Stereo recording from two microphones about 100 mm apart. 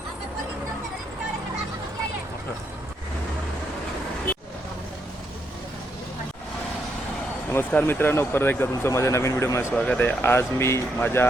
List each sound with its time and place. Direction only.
7.5 s speech: 20° left (ahead or behind)
9.7 s speech: 10° left (ahead or behind)